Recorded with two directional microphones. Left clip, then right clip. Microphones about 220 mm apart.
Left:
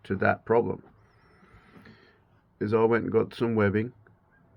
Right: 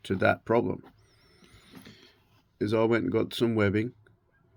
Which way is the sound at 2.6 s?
50° right (ahead or behind).